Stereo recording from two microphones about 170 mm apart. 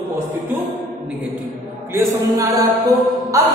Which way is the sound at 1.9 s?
20° right (ahead or behind).